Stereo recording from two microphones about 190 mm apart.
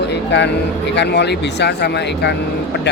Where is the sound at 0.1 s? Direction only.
65° left (ahead or behind).